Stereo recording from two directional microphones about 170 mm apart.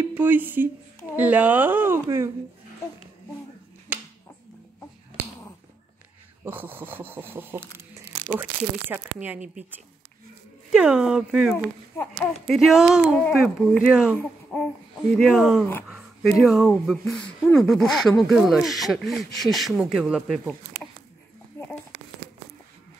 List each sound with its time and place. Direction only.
0.0 s speech: 10° right (ahead or behind)
3.9 s a sound: 10° right (ahead or behind)
6.4 s speech: 10° right (ahead or behind)
10.7 s speech: 5° right (ahead or behind)
11.5 s speech: 15° left (ahead or behind)
12.5 s speech: centre (ahead or behind)
13.1 s speech: 10° left (ahead or behind)
14.1 s speech: 10° left (ahead or behind)
15.1 s speech: centre (ahead or behind)
21.5 s a sound: 15° left (ahead or behind)